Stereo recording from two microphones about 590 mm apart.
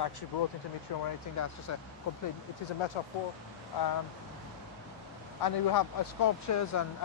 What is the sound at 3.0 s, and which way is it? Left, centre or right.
Speech, left.